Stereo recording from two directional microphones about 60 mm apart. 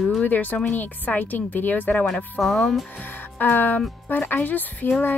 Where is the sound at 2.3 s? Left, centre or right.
Centre.